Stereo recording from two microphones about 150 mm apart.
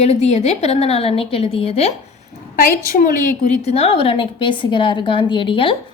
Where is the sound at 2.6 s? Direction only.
70° left (ahead or behind).